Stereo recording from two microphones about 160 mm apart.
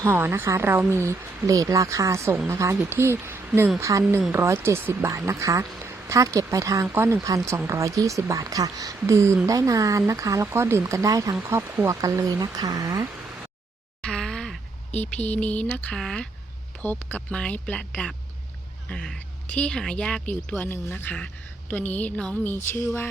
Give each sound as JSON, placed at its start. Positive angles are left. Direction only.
{"t": 0.0, "sound": "speech", "side_deg": -15}
{"t": 14.0, "sound": "a woman's voice", "side_deg": 5}